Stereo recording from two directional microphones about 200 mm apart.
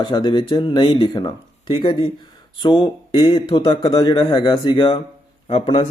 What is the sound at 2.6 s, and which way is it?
Speech, 25° left (ahead or behind).